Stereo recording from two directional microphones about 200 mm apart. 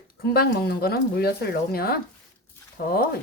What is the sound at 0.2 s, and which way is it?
A woman's voice, 50° left (ahead or behind).